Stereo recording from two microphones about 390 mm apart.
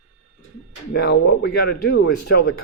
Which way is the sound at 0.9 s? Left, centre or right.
Left.